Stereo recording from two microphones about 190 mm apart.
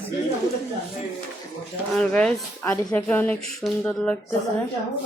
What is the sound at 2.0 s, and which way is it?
Speech, 5° left (ahead or behind).